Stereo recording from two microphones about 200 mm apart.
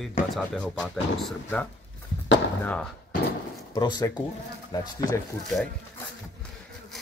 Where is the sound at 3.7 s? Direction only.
20° left (ahead or behind).